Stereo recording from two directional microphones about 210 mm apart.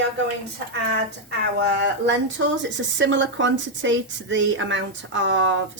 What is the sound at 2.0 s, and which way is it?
A woman's voice, 60° right (ahead or behind).